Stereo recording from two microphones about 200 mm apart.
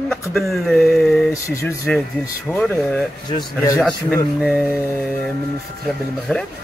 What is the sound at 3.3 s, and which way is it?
Speech, 20° left (ahead or behind).